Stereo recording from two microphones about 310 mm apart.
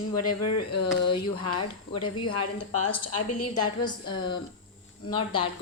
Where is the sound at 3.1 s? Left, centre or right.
Left.